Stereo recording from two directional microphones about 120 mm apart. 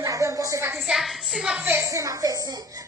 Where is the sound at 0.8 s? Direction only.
5° right (ahead or behind).